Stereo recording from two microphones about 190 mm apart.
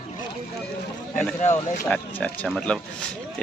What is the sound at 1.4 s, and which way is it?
Speech, 40° left (ahead or behind).